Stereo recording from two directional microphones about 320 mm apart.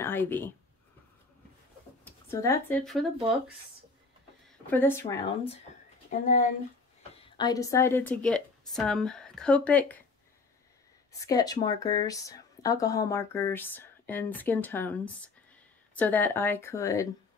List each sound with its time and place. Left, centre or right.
0.0 s speech: centre
2.0 s speech: centre
4.6 s speech: centre
6.2 s speech: left
7.3 s a woman's voice: centre
11.1 s speech: centre